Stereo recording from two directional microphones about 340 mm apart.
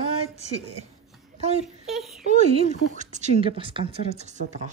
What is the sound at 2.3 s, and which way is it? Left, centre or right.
Speech, centre.